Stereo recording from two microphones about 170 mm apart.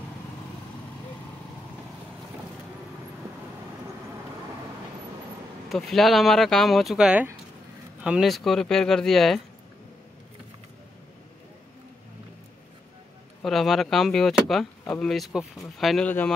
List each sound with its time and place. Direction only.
5.7 s speech: centre (ahead or behind)
13.4 s speech: centre (ahead or behind)